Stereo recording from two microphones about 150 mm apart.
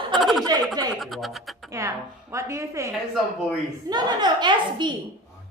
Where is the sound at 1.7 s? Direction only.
20° right (ahead or behind).